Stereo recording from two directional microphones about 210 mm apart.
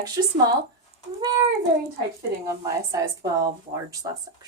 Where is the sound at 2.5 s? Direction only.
15° right (ahead or behind).